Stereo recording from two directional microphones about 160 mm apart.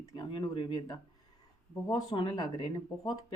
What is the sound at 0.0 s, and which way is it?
Speech, 30° left (ahead or behind).